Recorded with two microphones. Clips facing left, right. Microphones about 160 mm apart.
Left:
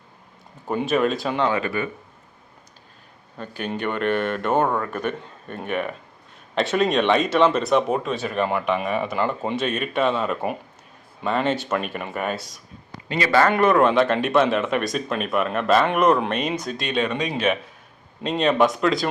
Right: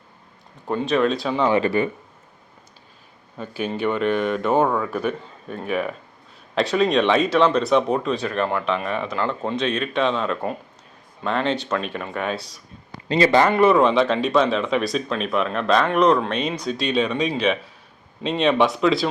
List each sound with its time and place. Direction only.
0.7 s speech: 5° left (ahead or behind)
1.5 s speech: 30° right (ahead or behind)
3.3 s speech: 5° right (ahead or behind)
13.1 s speech: 30° right (ahead or behind)
13.5 s speech: centre (ahead or behind)